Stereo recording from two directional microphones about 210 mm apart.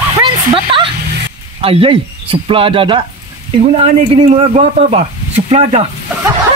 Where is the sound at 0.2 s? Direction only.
25° right (ahead or behind).